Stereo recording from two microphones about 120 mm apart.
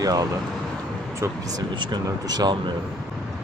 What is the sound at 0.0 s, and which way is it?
Speech, 30° right (ahead or behind).